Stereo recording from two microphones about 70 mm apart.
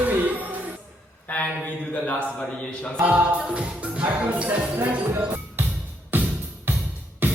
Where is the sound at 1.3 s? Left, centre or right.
Left.